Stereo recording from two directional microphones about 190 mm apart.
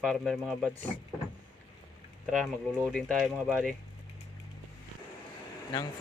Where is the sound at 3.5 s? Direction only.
5° right (ahead or behind).